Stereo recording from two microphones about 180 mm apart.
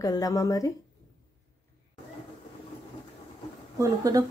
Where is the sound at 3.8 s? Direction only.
20° right (ahead or behind).